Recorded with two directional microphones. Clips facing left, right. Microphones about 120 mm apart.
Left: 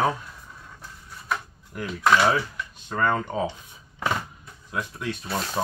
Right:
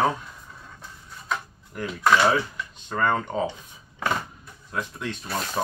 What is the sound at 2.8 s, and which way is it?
Speech, centre (ahead or behind).